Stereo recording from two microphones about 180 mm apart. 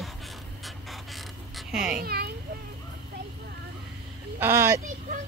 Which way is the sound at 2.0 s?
60° right (ahead or behind).